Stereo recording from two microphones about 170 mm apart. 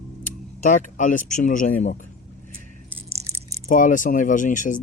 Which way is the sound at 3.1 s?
35° right (ahead or behind).